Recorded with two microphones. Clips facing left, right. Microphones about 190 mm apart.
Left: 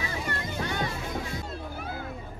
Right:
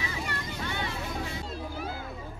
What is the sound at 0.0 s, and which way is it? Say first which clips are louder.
Vehicle: left 2 dB; 50° left (ahead or behind).